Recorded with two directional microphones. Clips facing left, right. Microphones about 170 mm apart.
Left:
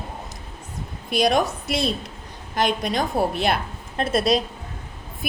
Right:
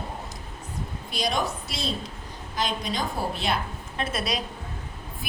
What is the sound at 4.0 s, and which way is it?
Speech, 35° left (ahead or behind).